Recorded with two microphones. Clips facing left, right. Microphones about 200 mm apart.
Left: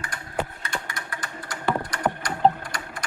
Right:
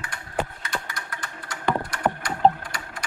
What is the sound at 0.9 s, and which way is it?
Typing, 10° left (ahead or behind).